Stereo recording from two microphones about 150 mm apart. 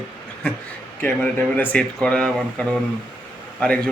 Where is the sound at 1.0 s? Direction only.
10° left (ahead or behind).